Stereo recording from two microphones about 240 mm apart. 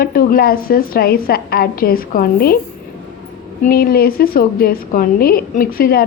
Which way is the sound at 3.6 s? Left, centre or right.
Left.